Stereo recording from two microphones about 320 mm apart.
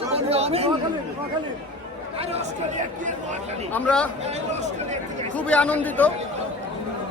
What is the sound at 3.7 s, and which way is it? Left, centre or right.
Speech, centre.